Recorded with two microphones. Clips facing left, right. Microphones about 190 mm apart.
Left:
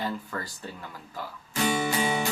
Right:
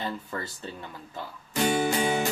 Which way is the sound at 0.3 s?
20° right (ahead or behind).